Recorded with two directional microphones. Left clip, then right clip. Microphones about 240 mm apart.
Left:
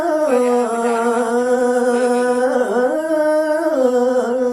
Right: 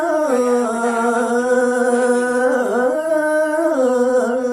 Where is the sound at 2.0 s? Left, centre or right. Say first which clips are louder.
Even; left.